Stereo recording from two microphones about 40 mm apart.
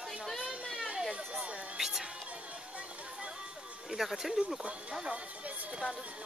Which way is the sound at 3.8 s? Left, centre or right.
Centre.